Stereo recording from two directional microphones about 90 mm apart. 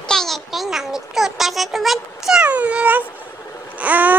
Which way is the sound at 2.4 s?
15° right (ahead or behind).